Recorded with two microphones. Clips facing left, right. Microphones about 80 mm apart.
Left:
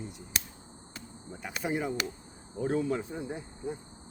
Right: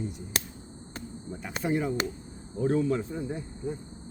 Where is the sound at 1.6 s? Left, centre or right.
Centre.